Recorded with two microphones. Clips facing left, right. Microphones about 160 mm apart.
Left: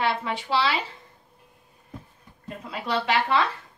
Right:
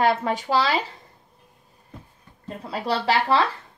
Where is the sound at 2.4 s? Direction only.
35° right (ahead or behind).